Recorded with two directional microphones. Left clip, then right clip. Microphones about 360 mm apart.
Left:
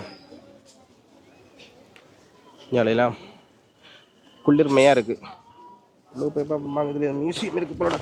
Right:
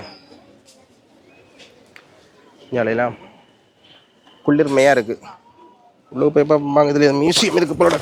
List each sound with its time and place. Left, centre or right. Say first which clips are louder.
2.7 s speech: right 2 dB; left
4.4 s speech: right 3 dB; left
6.1 s a man's voice: right 11 dB; left